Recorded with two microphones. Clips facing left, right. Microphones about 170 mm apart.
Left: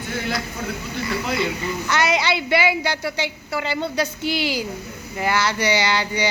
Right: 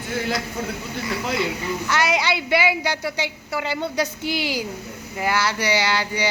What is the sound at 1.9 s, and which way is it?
A woman's voice, 10° right (ahead or behind).